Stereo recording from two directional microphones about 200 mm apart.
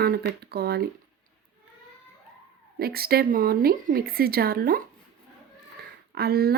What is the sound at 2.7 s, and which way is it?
Speech, 50° right (ahead or behind).